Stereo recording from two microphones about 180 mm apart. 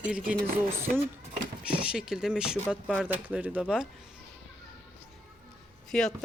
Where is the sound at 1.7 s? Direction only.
5° right (ahead or behind).